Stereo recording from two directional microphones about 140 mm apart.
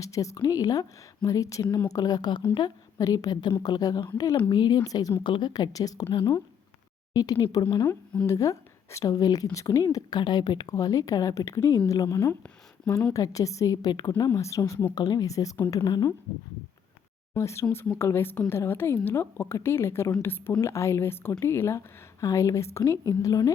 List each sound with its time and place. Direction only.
0.0 s a woman's voice: 25° left (ahead or behind)
7.1 s a woman's voice: 25° left (ahead or behind)
17.3 s a woman's voice: 20° left (ahead or behind)